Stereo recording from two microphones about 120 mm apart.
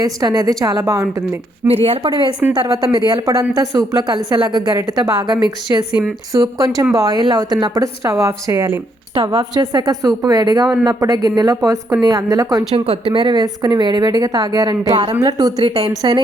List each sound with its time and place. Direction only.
0.0 s a woman's voice: 35° right (ahead or behind)
1.6 s speech: 55° right (ahead or behind)
2.0 s a woman's voice: 40° right (ahead or behind)
5.9 s speech: 10° right (ahead or behind)
6.3 s a woman's voice: 30° right (ahead or behind)
12.7 s a woman's voice: 50° right (ahead or behind)